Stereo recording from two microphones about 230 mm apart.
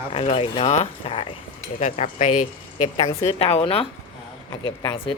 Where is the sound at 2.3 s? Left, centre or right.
Left.